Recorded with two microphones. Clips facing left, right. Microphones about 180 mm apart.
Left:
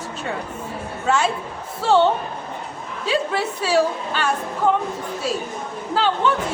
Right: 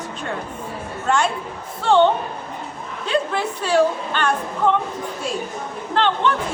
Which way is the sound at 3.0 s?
5° left (ahead or behind).